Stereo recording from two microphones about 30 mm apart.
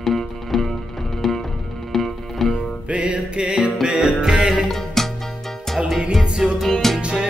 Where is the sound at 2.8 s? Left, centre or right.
Right.